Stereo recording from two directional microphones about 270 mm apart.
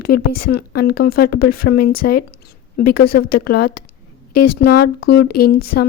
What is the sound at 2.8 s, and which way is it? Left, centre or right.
Speech, left.